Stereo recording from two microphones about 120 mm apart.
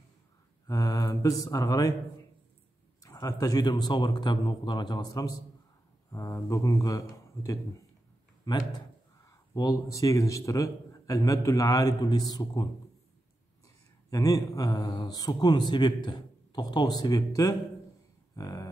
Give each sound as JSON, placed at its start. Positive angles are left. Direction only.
{"t": 0.7, "sound": "a man's voice", "side_deg": 30}
{"t": 3.0, "sound": "a man's voice", "side_deg": 30}
{"t": 14.1, "sound": "speech", "side_deg": 30}
{"t": 18.3, "sound": "a sound", "side_deg": 30}